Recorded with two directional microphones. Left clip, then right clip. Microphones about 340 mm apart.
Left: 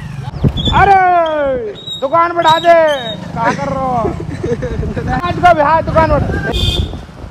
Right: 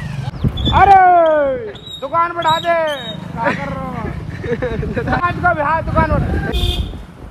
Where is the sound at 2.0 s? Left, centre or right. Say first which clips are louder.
Left 5 dB; left.